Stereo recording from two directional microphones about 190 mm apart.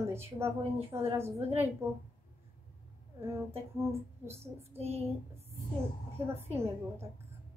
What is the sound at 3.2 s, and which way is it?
Speech, 10° right (ahead or behind).